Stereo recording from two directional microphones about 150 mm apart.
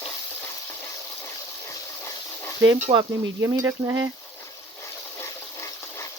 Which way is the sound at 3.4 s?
20° right (ahead or behind).